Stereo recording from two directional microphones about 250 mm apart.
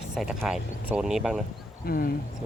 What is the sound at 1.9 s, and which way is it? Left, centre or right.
Speech, left.